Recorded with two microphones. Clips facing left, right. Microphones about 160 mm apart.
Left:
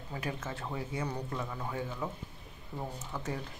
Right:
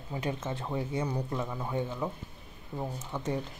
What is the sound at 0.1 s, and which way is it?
Speech, 20° right (ahead or behind).